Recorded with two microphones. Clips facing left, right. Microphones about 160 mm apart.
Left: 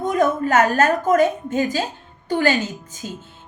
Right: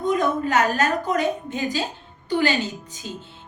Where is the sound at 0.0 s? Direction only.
45° left (ahead or behind).